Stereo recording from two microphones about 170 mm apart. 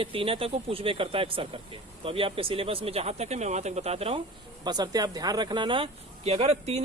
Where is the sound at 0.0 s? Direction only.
30° right (ahead or behind).